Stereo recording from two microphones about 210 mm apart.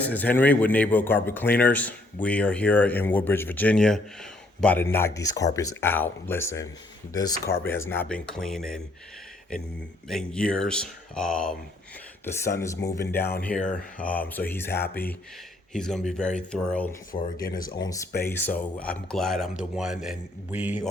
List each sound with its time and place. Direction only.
0.0 s speech: 10° left (ahead or behind)
10.1 s speech: 5° left (ahead or behind)
17.1 s speech: 40° left (ahead or behind)
17.7 s speech: 15° left (ahead or behind); by 20.7 s 10° right (ahead or behind)